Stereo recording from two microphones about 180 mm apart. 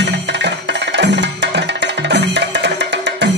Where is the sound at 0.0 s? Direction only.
75° right (ahead or behind).